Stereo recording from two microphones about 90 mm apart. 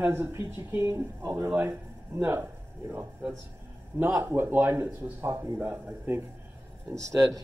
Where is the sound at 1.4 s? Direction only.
20° right (ahead or behind).